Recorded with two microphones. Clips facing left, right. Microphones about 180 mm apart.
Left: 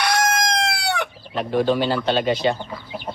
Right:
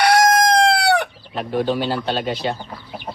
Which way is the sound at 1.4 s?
Centre (ahead or behind).